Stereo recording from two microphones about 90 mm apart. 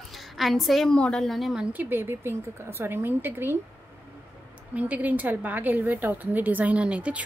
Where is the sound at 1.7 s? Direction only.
20° right (ahead or behind).